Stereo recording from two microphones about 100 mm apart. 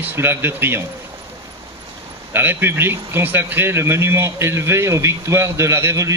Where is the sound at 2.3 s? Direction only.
20° right (ahead or behind).